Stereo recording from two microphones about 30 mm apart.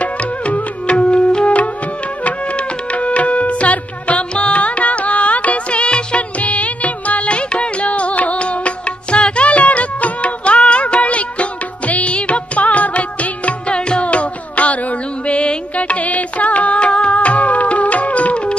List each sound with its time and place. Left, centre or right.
0.0 s music: left
6.4 s music of bollywood: left
7.2 s music: left
10.2 s music: left
13.7 s music: left
14.0 s music: left
16.8 s music: left
17.1 s music: left